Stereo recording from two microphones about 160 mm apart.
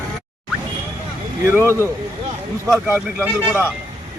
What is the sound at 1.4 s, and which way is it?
Speech, 15° right (ahead or behind).